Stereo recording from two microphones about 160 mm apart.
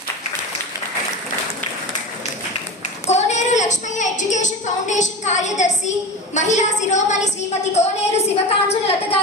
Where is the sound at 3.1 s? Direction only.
45° left (ahead or behind).